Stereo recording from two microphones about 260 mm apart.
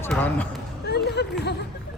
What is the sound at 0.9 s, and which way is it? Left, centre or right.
Speech, left.